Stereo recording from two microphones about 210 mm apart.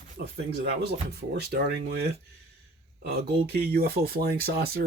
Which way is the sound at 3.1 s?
45° right (ahead or behind).